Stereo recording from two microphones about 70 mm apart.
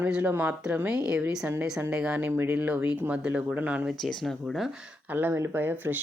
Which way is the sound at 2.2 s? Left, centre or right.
Right.